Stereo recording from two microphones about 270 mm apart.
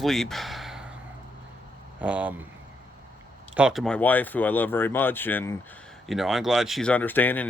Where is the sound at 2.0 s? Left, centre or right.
Centre.